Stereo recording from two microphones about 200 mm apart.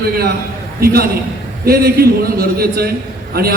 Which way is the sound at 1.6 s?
50° right (ahead or behind).